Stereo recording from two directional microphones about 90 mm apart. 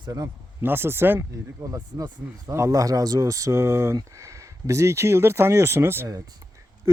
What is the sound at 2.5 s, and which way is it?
Speech, 35° right (ahead or behind).